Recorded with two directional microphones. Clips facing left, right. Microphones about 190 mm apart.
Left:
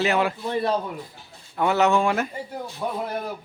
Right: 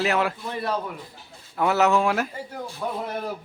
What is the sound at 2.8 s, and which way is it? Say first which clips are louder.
Speech: left 1 dB; 15° left (ahead or behind).